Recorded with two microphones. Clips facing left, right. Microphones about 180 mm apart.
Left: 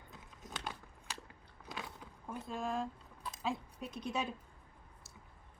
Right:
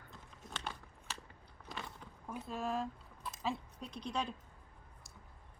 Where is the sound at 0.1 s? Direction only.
5° left (ahead or behind).